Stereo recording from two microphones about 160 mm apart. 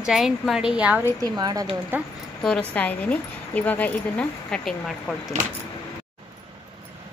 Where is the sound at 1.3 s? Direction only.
25° right (ahead or behind).